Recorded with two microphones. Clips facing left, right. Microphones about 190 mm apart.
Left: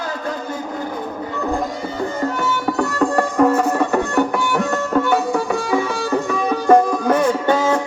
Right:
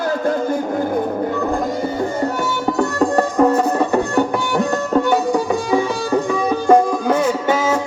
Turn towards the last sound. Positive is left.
turn(degrees=-5)  # may be behind; listen again after turning